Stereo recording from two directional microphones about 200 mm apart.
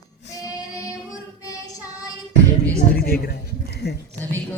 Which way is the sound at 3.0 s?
50° left (ahead or behind).